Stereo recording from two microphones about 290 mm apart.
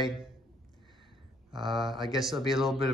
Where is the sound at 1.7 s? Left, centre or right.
Centre.